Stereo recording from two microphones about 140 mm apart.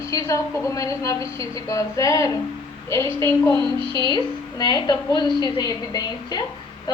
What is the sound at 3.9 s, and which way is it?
A woman's voice, 30° left (ahead or behind).